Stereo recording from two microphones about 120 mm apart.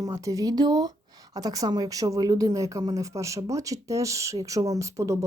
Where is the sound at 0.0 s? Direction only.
30° right (ahead or behind).